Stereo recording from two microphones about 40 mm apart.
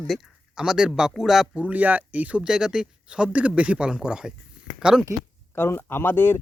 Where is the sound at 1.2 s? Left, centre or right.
Centre.